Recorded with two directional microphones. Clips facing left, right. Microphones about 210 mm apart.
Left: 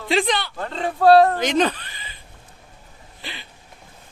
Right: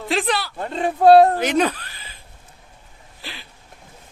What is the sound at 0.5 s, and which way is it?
Speech, 15° right (ahead or behind).